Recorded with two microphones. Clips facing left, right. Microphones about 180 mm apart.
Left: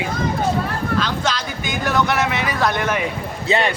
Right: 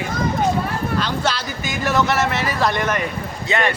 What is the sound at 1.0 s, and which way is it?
Speech, 10° right (ahead or behind).